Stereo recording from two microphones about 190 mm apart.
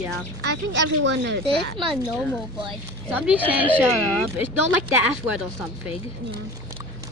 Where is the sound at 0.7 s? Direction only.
70° right (ahead or behind).